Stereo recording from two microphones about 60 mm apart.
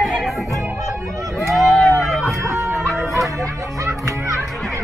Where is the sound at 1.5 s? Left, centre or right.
Centre.